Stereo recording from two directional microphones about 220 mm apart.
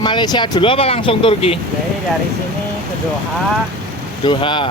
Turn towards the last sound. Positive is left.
turn(degrees=20)  # may be behind; listen again after turning